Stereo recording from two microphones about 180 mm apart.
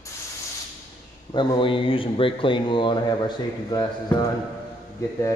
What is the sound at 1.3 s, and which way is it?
Speech, 25° left (ahead or behind).